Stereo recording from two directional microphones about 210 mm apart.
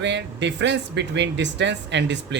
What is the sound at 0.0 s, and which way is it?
Speech, 55° right (ahead or behind).